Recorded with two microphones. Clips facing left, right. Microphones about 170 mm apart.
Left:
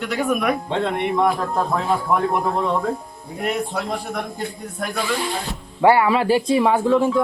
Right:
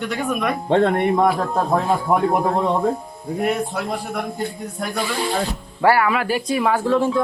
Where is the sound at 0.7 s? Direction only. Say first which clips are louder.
Right 5 dB; 50° right (ahead or behind).